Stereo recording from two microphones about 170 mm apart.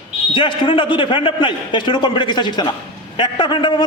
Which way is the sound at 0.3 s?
30° left (ahead or behind).